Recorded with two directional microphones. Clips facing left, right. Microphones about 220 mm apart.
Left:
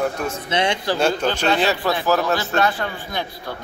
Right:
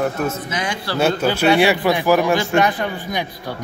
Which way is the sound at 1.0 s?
10° right (ahead or behind).